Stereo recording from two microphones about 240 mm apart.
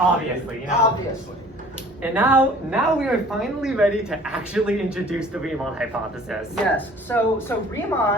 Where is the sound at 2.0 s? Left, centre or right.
Centre.